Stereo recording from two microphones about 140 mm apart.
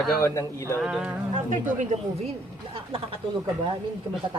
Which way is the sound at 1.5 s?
65° right (ahead or behind).